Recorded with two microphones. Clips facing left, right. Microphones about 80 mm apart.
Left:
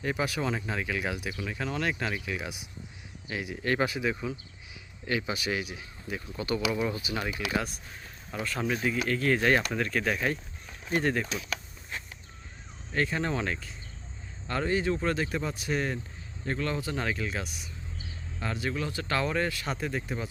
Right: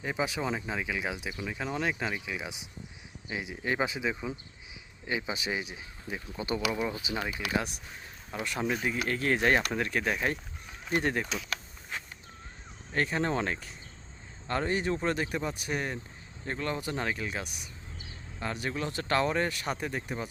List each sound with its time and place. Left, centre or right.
0.0 s speech: centre
9.0 s speech: right
12.9 s speech: right
19.7 s speech: centre